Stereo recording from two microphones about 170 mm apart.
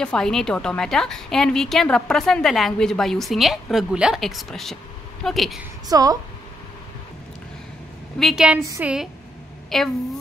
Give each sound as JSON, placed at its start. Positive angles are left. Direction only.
{"t": 0.0, "sound": "a woman's voice", "side_deg": 5}
{"t": 5.9, "sound": "a woman's voice", "side_deg": -20}
{"t": 8.2, "sound": "a woman's voice", "side_deg": 0}